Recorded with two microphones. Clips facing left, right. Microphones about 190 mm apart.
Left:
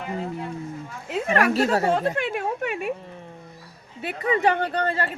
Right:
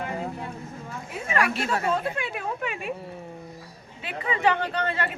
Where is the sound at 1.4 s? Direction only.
40° left (ahead or behind).